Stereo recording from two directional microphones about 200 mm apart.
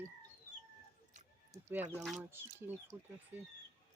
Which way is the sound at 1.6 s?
10° right (ahead or behind).